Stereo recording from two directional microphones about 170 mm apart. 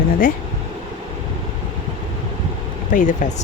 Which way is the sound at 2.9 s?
50° left (ahead or behind).